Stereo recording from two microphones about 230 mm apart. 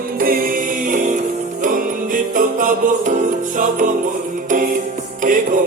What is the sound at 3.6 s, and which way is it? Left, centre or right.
Jingle bell, right.